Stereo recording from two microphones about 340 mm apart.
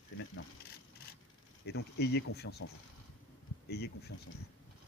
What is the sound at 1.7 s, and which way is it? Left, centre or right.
Speech, left.